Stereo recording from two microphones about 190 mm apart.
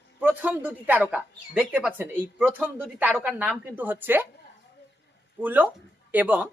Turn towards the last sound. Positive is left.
turn(degrees=-10)  # may be behind; listen again after turning